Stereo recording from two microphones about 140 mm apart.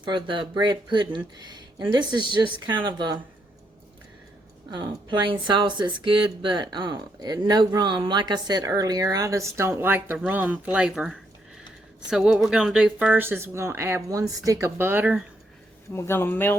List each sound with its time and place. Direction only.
0.0 s speech: 35° right (ahead or behind)
4.7 s speech: 35° right (ahead or behind); by 15.2 s 10° right (ahead or behind)
15.9 s speech: 15° left (ahead or behind)